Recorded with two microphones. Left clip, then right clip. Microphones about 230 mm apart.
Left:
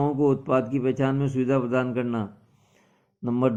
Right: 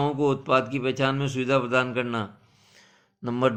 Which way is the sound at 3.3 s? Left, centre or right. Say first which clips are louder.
Right 1 dB; right.